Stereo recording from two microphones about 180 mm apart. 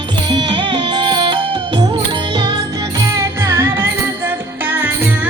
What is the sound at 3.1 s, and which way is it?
Music, 15° right (ahead or behind).